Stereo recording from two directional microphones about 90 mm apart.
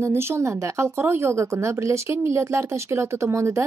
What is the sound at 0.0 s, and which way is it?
A woman's voice, 30° right (ahead or behind).